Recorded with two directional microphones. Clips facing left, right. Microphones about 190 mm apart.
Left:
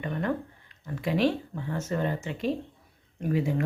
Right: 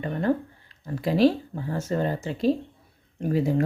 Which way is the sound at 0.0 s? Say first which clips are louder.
Right 5 dB; 35° right (ahead or behind).